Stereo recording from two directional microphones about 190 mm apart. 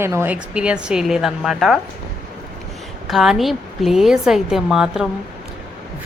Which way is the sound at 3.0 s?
Centre (ahead or behind).